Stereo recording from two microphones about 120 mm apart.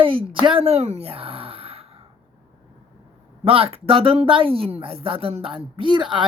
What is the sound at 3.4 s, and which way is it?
Speech, 50° right (ahead or behind).